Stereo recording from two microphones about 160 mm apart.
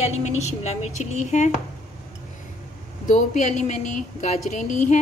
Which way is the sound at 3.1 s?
50° left (ahead or behind).